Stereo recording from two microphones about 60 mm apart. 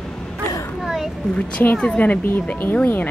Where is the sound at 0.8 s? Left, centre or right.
Centre.